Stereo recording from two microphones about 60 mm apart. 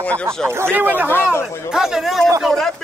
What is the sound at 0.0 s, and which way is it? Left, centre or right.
Speech, left.